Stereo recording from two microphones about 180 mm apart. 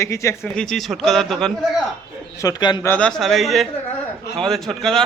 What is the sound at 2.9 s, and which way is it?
A man's voice, 5° left (ahead or behind).